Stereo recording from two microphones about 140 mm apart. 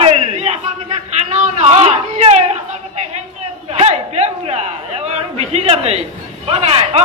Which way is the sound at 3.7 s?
50° right (ahead or behind).